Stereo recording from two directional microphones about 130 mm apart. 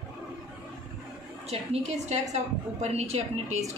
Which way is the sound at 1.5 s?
55° right (ahead or behind).